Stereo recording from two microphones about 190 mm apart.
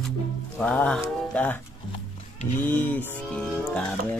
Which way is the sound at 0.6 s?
5° left (ahead or behind).